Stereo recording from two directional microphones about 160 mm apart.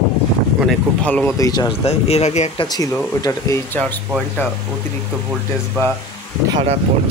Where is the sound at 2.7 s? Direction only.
20° left (ahead or behind).